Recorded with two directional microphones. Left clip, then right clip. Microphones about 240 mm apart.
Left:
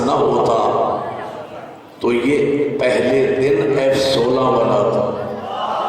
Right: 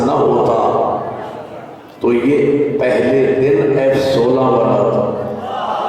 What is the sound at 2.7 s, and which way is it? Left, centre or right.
A man's voice, centre.